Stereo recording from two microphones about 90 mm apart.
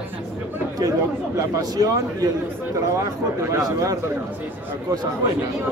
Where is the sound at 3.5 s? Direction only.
40° right (ahead or behind).